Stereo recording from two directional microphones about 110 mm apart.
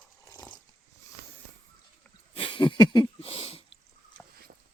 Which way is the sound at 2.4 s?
50° left (ahead or behind).